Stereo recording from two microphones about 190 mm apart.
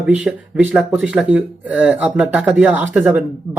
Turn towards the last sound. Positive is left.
turn(degrees=-5)  # may be behind; listen again after turning